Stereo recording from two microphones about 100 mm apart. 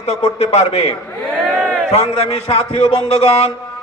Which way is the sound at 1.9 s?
90° left.